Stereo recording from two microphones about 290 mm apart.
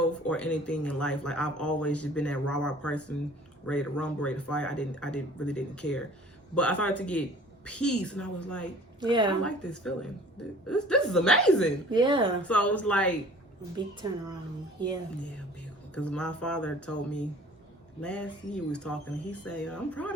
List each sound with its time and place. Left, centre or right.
0.3 s speech: centre
9.0 s a woman's voice: centre
9.4 s speech: centre
11.9 s a woman's voice: centre
12.4 s speech: centre
13.7 s a woman's voice: centre
16.0 s speech: centre